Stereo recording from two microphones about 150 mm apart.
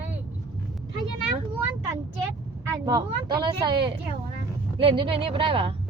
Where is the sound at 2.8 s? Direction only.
30° right (ahead or behind).